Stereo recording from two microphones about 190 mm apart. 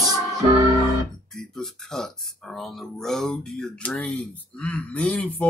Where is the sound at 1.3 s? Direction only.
Centre (ahead or behind).